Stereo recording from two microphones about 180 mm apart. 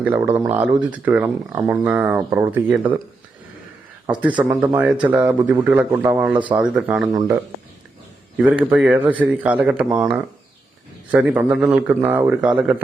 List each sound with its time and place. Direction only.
0.0 s speech: 10° right (ahead or behind)
4.2 s speech: 10° right (ahead or behind)
7.1 s speech: 20° right (ahead or behind)
8.4 s speech: 10° right (ahead or behind)